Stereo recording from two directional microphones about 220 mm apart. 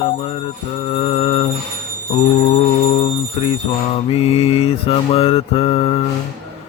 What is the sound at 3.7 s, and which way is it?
Mantra, 25° left (ahead or behind).